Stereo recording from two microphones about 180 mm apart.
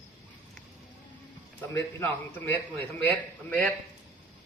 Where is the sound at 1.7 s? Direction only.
10° left (ahead or behind).